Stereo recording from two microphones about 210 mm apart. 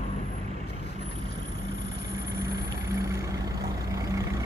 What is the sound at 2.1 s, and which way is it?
Vehicle, 15° right (ahead or behind).